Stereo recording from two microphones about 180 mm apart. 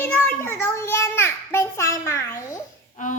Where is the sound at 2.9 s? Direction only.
45° left (ahead or behind).